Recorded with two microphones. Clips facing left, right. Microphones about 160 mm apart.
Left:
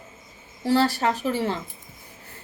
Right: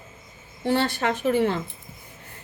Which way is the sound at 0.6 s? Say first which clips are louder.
Left 2 dB; 35° left (ahead or behind).